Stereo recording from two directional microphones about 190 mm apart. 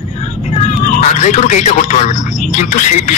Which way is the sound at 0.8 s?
45° left (ahead or behind).